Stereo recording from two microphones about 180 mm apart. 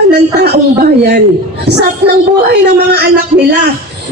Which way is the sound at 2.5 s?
65° right (ahead or behind).